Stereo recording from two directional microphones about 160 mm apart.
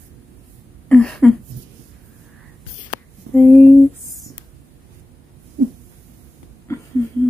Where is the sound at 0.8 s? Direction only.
5° left (ahead or behind).